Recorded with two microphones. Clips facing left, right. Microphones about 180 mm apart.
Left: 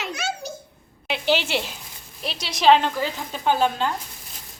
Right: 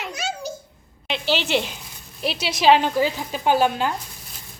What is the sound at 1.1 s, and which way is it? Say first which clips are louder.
A woman's voice: even; 10° left (ahead or behind).